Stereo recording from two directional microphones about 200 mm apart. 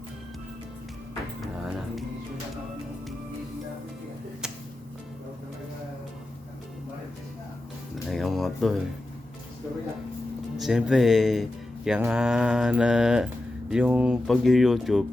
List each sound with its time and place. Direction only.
8.1 s music: centre (ahead or behind)
10.6 s speech: 5° right (ahead or behind)